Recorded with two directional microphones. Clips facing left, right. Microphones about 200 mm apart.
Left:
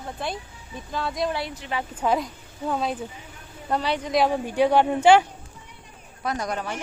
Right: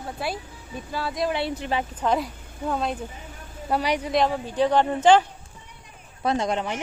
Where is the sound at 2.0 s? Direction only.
5° left (ahead or behind).